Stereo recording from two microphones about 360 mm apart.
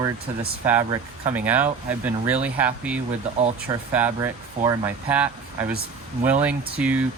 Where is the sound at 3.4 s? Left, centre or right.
Centre.